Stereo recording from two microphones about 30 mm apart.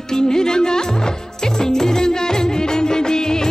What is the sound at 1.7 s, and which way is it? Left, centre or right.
Music, left.